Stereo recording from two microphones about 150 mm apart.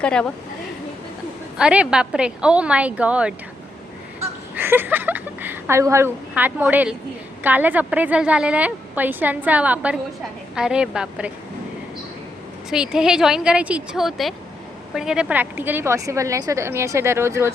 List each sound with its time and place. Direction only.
0.0 s a woman's voice: 5° left (ahead or behind)
1.5 s a woman's voice: 5° right (ahead or behind)
4.2 s a sound: 15° right (ahead or behind)
7.4 s a woman's voice: 10° right (ahead or behind)
12.7 s a woman's voice: 5° right (ahead or behind)